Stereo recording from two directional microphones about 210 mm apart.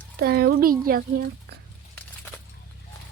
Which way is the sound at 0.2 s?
50° right (ahead or behind).